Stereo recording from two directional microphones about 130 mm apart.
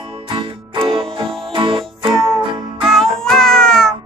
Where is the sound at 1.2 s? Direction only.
5° left (ahead or behind).